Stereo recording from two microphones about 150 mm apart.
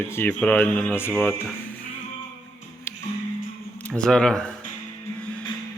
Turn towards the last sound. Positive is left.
turn(degrees=5)  # may be behind; listen again after turning